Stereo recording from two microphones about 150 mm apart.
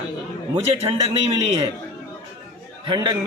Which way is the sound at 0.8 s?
40° right (ahead or behind).